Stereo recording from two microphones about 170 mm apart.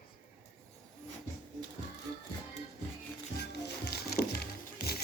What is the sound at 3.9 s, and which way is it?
Music, 70° left (ahead or behind).